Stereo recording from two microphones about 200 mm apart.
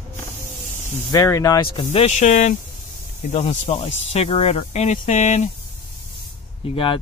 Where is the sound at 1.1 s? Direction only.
15° left (ahead or behind); by 5.5 s 35° left (ahead or behind).